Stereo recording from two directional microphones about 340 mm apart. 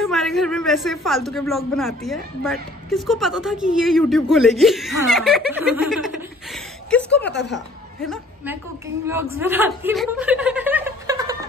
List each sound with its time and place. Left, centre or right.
0.0 s a man's voice: centre
7.1 s speech: left
8.0 s a woman's voice: centre